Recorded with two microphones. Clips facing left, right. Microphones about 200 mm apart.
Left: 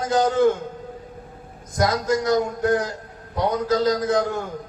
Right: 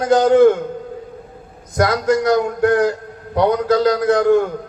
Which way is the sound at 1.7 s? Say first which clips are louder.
Right 5 dB; 65° right (ahead or behind).